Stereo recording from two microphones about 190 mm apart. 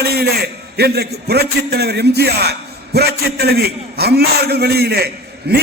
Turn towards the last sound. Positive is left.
turn(degrees=-60)  # may be behind; listen again after turning